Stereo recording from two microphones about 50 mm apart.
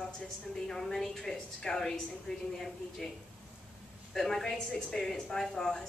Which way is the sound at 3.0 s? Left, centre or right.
Centre.